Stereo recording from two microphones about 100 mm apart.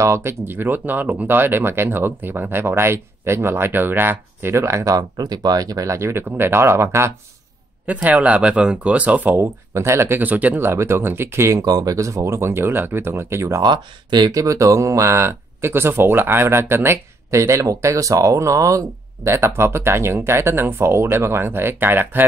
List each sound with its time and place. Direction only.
0.0 s speech: 25° right (ahead or behind)
7.8 s speech: 15° right (ahead or behind)
9.8 s speech: 25° right (ahead or behind)
11.6 s speech: 40° right (ahead or behind)
13.6 s speech: 45° right (ahead or behind); by 22.2 s 20° right (ahead or behind)